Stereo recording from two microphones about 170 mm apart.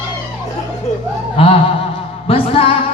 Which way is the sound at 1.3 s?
35° left (ahead or behind).